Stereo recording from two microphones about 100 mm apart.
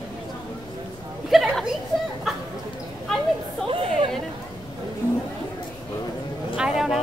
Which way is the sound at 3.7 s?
65° right (ahead or behind).